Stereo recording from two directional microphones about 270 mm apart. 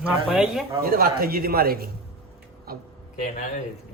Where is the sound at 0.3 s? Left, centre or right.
Centre.